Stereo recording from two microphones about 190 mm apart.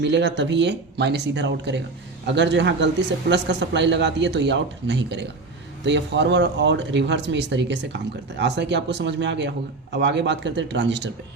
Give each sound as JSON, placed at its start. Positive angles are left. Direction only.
{"t": 0.0, "sound": "speech", "side_deg": -70}